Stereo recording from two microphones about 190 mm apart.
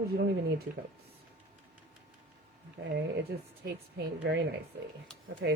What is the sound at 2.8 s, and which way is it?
A woman's voice, 55° right (ahead or behind).